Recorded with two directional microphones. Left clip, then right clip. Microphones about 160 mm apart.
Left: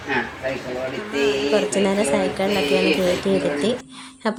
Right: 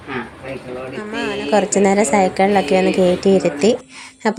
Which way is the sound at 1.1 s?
35° right (ahead or behind).